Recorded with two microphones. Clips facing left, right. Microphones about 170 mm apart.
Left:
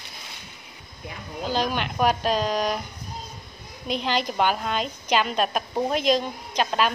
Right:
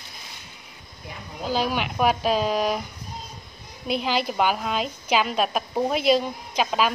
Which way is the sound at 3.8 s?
5° right (ahead or behind).